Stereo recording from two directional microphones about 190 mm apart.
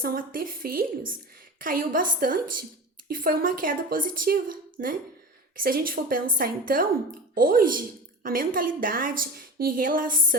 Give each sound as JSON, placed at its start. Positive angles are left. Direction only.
{"t": 0.0, "sound": "a woman's voice", "side_deg": -50}